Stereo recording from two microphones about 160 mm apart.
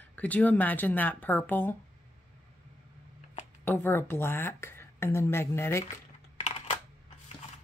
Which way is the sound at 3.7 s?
15° left (ahead or behind).